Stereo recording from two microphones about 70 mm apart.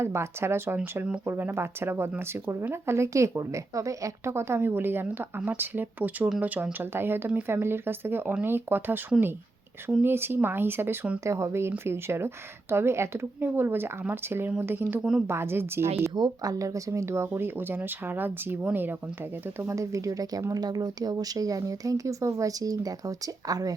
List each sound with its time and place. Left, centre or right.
0.0 s speech: right
11.2 s speech: right
16.1 s speech: right
17.2 s speech: right
19.5 s speech: right
20.5 s speech: right